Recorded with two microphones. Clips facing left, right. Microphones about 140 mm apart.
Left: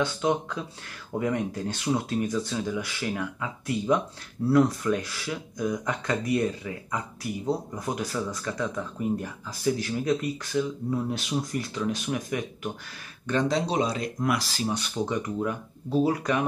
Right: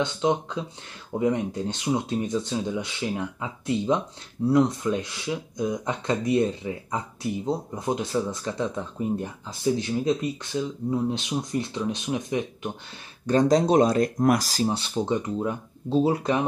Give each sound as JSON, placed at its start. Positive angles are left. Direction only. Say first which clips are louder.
{"t": 0.0, "sound": "speech", "louder": "right 1 dB", "side_deg": -20}
{"t": 13.3, "sound": "speech", "louder": "right 6 dB", "side_deg": -40}